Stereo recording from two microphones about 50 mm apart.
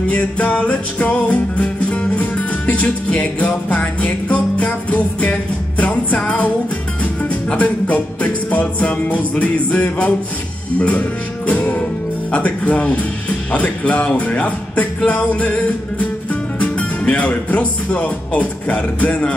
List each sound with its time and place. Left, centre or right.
0.1 s music: left
7.5 s music: left
16.5 s speech: left